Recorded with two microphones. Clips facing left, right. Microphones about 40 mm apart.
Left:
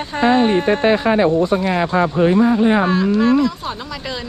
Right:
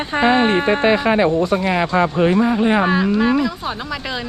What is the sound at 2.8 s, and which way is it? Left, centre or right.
Speech, centre.